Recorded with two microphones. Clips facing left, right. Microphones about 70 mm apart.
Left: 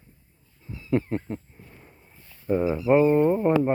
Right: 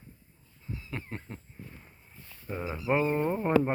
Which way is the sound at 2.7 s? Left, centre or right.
Centre.